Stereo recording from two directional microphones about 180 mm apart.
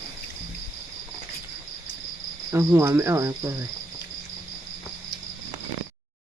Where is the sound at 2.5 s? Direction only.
15° right (ahead or behind).